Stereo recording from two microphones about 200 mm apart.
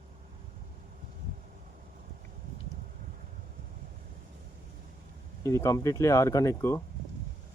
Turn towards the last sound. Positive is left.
turn(degrees=15)  # may be behind; listen again after turning